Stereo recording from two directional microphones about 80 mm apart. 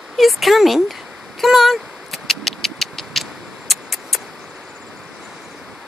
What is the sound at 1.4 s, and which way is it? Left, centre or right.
Vehicle, centre.